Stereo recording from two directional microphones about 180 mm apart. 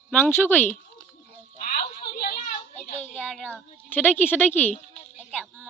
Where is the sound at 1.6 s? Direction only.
50° left (ahead or behind).